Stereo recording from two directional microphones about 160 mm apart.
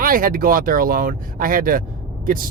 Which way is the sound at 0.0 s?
60° right (ahead or behind).